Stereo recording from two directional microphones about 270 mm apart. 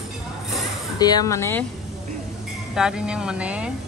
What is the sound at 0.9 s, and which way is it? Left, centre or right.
Speech, centre.